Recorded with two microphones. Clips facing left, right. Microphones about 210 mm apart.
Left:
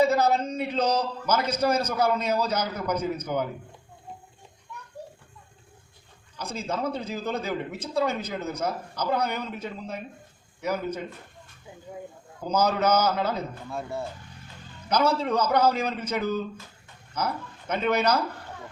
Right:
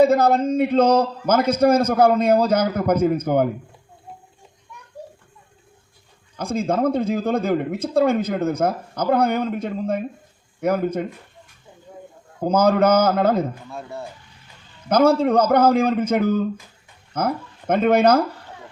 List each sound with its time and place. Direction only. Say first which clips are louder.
0.0 s speech: right 6 dB; 55° right (ahead or behind)
6.3 s speech: right 9 dB; 50° right (ahead or behind)
12.4 s speech: right 8 dB; 55° right (ahead or behind)
13.7 s speech: even; centre (ahead or behind)
14.8 s speech: right 8 dB; 55° right (ahead or behind)